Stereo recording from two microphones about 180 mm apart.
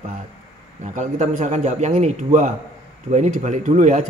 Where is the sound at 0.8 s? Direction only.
40° right (ahead or behind).